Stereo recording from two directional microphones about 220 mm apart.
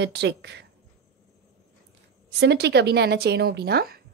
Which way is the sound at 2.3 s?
50° right (ahead or behind).